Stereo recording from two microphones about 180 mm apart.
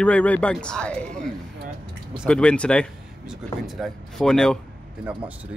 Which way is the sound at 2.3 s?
5° left (ahead or behind).